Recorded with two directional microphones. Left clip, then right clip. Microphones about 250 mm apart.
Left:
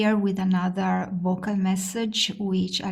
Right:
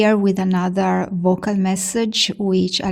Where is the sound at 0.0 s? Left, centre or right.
Right.